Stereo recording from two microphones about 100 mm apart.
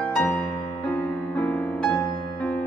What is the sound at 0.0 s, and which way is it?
Music, 10° left (ahead or behind).